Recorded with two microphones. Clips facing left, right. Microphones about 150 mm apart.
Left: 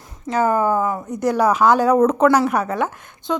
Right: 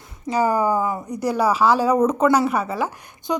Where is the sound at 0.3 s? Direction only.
5° right (ahead or behind).